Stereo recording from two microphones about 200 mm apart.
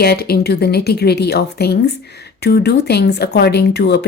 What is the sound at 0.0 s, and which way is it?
Speech, 50° left (ahead or behind).